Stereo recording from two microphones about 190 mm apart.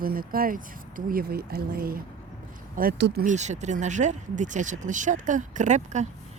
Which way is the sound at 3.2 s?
40° right (ahead or behind).